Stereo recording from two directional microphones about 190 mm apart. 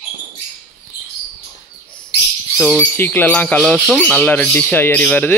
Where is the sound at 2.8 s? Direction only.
10° left (ahead or behind).